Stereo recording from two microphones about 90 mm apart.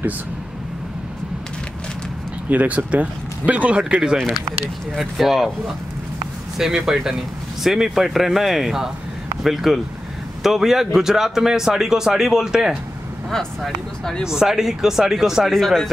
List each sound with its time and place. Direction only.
2.5 s a man's voice: 15° right (ahead or behind)
6.6 s a man's voice: 5° right (ahead or behind)
13.3 s a man's voice: 5° left (ahead or behind)
14.2 s a man's voice: 5° right (ahead or behind)